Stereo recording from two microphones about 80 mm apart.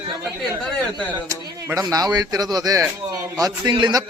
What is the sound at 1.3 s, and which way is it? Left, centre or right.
A man's voice, right.